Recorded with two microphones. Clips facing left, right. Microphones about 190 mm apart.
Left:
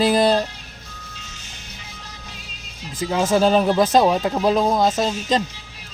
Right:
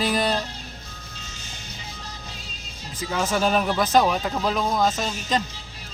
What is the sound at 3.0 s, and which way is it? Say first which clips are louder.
Speech: left 6 dB; 30° left (ahead or behind).